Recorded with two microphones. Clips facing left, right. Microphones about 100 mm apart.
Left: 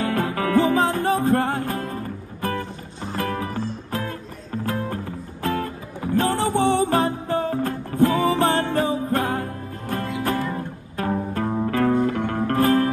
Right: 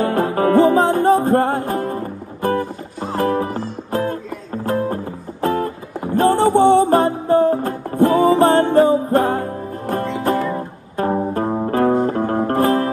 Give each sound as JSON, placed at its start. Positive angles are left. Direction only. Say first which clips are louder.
{"t": 0.0, "sound": "music", "louder": "right 6 dB", "side_deg": -35}